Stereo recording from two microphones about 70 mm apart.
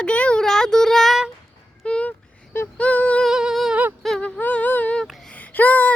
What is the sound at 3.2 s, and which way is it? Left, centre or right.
Music, centre.